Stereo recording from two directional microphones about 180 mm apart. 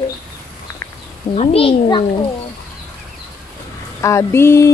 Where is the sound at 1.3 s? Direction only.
35° left (ahead or behind).